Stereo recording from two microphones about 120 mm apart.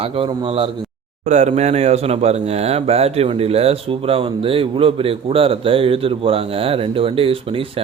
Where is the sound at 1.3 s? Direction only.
75° right (ahead or behind).